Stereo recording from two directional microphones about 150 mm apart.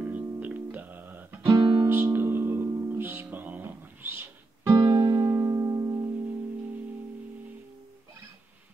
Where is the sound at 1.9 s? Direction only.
15° right (ahead or behind).